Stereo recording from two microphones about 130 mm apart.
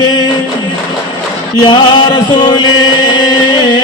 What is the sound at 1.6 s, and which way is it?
Chant, 35° left (ahead or behind).